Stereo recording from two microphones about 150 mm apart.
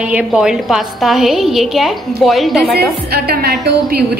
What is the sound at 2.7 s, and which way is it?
A woman's voice, 90° right.